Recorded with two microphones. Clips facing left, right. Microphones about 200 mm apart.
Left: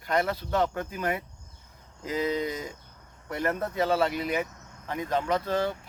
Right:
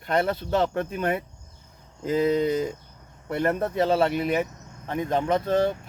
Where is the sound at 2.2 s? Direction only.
50° right (ahead or behind).